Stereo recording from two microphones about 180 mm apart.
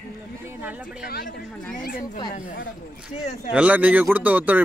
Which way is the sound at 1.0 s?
60° left (ahead or behind).